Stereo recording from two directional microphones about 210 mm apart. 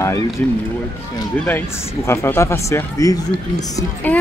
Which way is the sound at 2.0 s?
10° left (ahead or behind).